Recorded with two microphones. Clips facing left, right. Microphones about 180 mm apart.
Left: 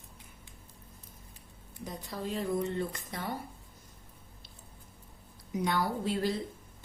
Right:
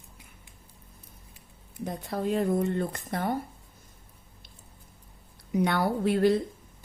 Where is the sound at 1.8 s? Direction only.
60° right (ahead or behind).